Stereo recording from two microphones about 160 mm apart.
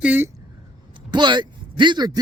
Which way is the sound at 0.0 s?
10° right (ahead or behind).